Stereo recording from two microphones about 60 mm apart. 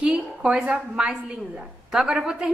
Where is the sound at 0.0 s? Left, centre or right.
Centre.